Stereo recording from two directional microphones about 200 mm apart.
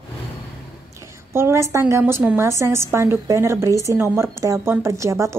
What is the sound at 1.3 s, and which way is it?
A woman's voice, 15° right (ahead or behind).